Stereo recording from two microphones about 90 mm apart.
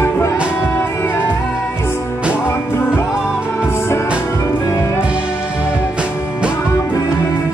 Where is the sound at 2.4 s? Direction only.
25° left (ahead or behind).